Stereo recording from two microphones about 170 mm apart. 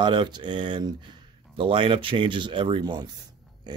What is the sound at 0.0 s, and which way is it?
Speech, 25° right (ahead or behind).